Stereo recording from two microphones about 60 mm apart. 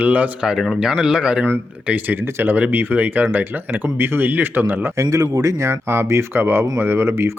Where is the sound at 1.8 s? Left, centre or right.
Right.